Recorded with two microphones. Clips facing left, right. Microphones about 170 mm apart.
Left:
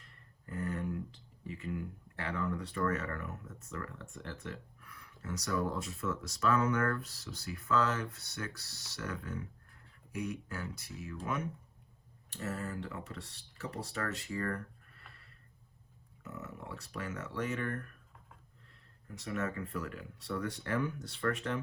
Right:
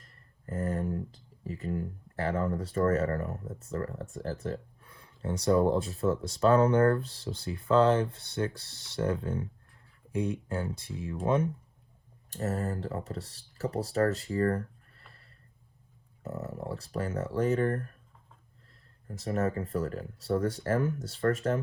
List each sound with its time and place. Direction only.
0.0 s speech: 40° right (ahead or behind)
12.3 s speech: 40° right (ahead or behind)
19.0 s speech: 40° right (ahead or behind)